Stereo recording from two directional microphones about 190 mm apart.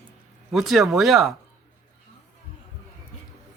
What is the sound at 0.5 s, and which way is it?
Speech, centre (ahead or behind).